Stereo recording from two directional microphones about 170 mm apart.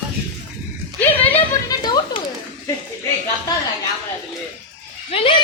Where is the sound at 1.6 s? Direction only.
25° left (ahead or behind).